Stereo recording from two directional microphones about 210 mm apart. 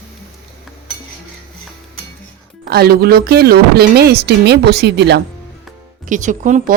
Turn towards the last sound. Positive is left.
turn(degrees=-35)  # may be behind; listen again after turning